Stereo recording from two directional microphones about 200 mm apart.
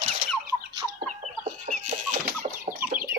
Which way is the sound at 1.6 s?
40° right (ahead or behind).